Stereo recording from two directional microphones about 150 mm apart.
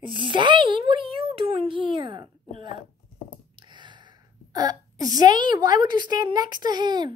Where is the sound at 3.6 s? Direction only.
30° right (ahead or behind).